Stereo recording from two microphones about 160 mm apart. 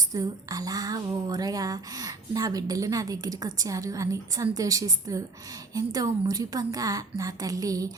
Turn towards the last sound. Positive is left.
turn(degrees=-20)  # may be behind; listen again after turning